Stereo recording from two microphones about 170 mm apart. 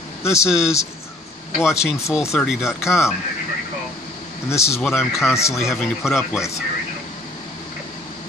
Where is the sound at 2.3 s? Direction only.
Centre (ahead or behind).